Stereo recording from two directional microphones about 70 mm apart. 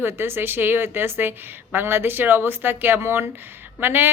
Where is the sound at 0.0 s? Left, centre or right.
Right.